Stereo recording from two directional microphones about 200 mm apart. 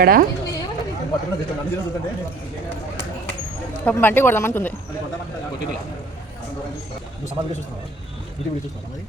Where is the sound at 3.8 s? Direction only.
10° left (ahead or behind).